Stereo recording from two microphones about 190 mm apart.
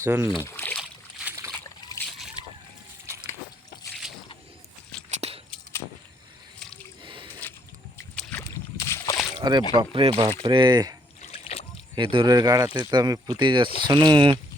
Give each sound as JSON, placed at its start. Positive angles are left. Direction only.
{"t": 0.0, "sound": "speech", "side_deg": -15}
{"t": 0.3, "sound": "boat", "side_deg": 10}
{"t": 0.8, "sound": "boat", "side_deg": -10}
{"t": 2.4, "sound": "boat", "side_deg": 25}
{"t": 5.1, "sound": "a sound", "side_deg": -35}
{"t": 7.0, "sound": "squish", "side_deg": -25}
{"t": 8.1, "sound": "rowboat", "side_deg": 10}
{"t": 8.8, "sound": "a sound", "side_deg": 15}
{"t": 9.4, "sound": "speech", "side_deg": -20}
{"t": 11.2, "sound": "boat", "side_deg": 30}
{"t": 11.9, "sound": "speech", "side_deg": -25}